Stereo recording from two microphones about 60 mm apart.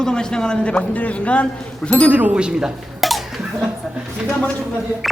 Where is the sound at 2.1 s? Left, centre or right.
Right.